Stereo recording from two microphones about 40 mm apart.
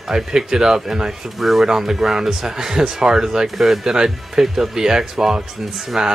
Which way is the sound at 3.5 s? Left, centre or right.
Centre.